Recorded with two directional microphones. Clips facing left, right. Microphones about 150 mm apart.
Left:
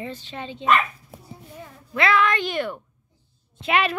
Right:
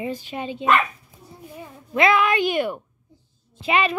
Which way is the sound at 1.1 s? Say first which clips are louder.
Left 4 dB; 70° left (ahead or behind).